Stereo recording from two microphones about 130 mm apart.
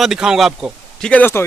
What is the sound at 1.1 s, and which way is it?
Speech, 15° left (ahead or behind).